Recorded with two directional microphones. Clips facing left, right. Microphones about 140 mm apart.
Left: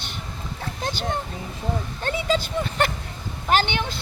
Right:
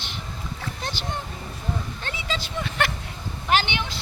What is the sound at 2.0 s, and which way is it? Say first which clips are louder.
Speech: left 8 dB; 45° left (ahead or behind).